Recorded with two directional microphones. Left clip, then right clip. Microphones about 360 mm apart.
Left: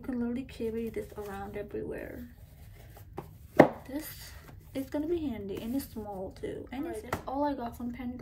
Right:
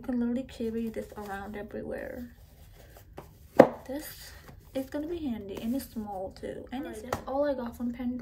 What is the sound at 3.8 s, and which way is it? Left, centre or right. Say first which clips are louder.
A woman's voice: right 2 dB; centre.